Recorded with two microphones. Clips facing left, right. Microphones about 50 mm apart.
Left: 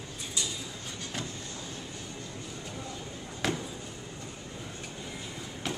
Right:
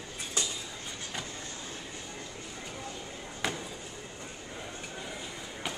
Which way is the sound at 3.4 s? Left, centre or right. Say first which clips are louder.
Left 3 dB; centre.